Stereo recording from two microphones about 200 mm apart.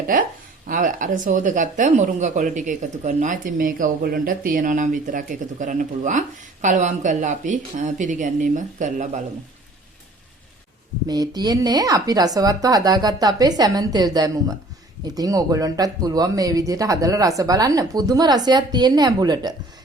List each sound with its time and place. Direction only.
0.7 s speech: 40° right (ahead or behind)
11.1 s speech: 20° right (ahead or behind)